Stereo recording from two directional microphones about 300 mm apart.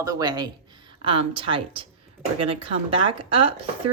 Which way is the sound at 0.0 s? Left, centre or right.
Centre.